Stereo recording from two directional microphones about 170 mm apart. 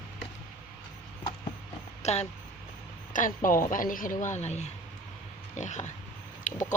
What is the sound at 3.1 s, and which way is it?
Speech, 50° left (ahead or behind).